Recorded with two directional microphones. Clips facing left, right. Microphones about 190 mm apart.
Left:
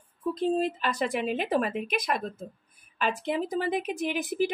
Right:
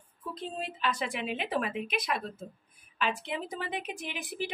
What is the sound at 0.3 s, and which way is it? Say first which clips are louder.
A woman's voice: left 12 dB; 40° left (ahead or behind).